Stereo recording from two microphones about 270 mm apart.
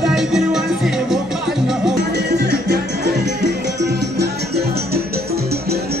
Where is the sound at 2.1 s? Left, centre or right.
Right.